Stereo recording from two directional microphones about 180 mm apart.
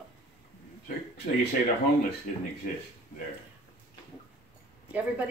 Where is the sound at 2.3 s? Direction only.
45° left (ahead or behind).